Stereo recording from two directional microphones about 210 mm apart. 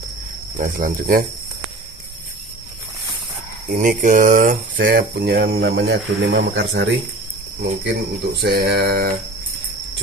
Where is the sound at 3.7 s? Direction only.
40° right (ahead or behind); by 6.9 s 55° right (ahead or behind).